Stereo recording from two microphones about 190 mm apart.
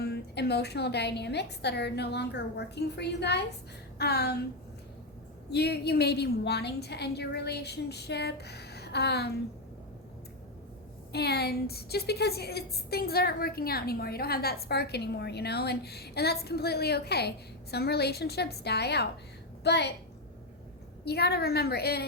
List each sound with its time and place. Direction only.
0.0 s a woman's voice: 60° left (ahead or behind)
5.5 s a woman's voice: 60° left (ahead or behind)
11.1 s a woman's voice: 60° left (ahead or behind)
21.0 s a woman's voice: 60° left (ahead or behind)